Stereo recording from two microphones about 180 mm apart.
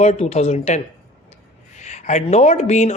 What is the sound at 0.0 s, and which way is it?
A man's voice, 35° left (ahead or behind).